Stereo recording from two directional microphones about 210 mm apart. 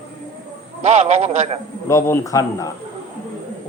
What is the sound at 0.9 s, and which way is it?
Speech, 35° right (ahead or behind).